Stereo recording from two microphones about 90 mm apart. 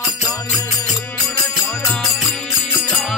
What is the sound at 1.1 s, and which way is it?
Music, 35° left (ahead or behind).